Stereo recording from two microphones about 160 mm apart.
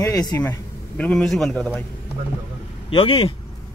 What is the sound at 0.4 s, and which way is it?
Speech, 10° left (ahead or behind).